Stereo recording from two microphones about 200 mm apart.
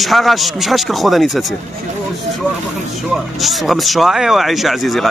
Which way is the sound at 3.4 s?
Centre (ahead or behind).